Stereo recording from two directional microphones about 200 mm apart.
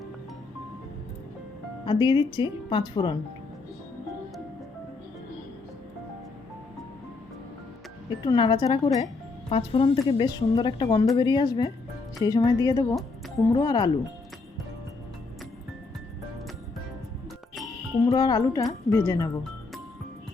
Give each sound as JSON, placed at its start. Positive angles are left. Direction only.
{"t": 1.8, "sound": "speech", "side_deg": 20}
{"t": 8.2, "sound": "speech", "side_deg": 25}
{"t": 18.0, "sound": "a woman's voice", "side_deg": 20}